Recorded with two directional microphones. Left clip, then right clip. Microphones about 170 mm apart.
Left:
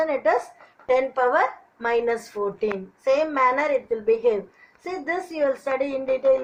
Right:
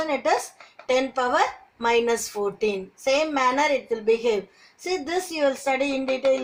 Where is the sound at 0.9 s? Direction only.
65° right (ahead or behind).